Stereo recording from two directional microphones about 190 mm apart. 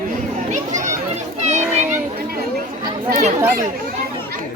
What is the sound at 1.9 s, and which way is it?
Chatter, 50° right (ahead or behind).